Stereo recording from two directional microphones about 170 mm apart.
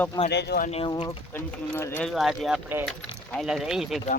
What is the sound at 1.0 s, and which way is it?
Speech, 10° left (ahead or behind).